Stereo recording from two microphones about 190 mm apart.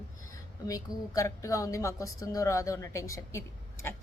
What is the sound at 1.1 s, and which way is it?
Speech, 15° left (ahead or behind).